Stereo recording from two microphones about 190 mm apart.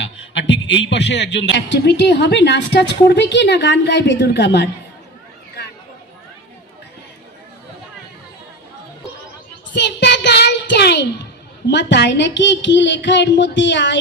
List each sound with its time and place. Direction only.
0.0 s a man's voice: 75° left (ahead or behind)
9.7 s child singing: 65° left (ahead or behind)
11.7 s a woman's voice: 65° left (ahead or behind)